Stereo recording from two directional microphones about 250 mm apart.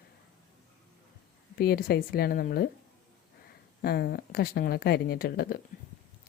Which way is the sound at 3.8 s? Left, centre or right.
Left.